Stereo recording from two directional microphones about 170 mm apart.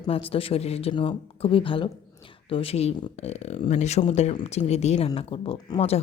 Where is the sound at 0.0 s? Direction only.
35° left (ahead or behind).